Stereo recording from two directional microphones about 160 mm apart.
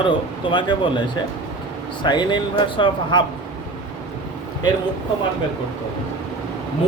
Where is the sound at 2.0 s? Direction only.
30° left (ahead or behind).